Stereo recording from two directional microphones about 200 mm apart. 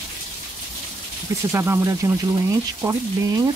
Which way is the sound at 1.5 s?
15° right (ahead or behind).